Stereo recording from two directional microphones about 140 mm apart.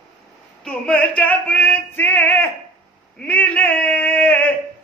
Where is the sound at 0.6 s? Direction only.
5° left (ahead or behind).